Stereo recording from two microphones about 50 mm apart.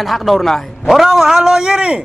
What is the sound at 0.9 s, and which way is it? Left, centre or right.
A man's voice, centre.